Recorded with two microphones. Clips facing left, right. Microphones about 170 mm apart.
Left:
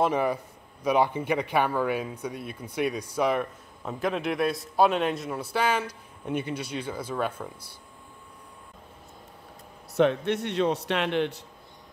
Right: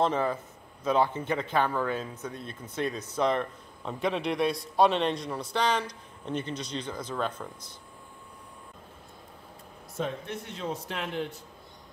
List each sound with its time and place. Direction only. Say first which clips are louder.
0.0 s a man's voice: left 2 dB; 10° left (ahead or behind)
9.9 s a man's voice: left 10 dB; 75° left (ahead or behind)